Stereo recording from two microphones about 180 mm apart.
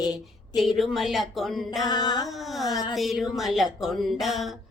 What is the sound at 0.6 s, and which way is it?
Music, centre (ahead or behind).